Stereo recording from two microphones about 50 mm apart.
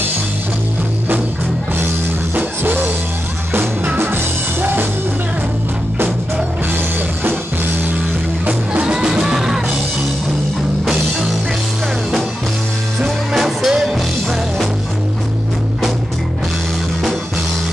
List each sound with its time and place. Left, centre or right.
2.3 s music: right
4.0 s music: right
8.5 s music: right
8.9 s music: centre
13.0 s music: centre